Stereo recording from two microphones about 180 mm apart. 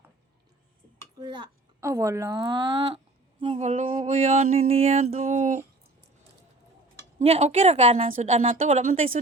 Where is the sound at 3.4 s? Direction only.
35° right (ahead or behind).